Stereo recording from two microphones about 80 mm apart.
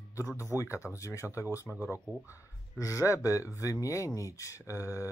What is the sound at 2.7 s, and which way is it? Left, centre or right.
Speech, left.